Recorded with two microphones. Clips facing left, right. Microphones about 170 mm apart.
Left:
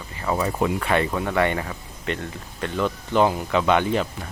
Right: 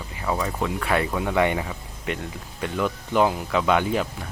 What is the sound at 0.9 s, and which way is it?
Speech, 5° right (ahead or behind).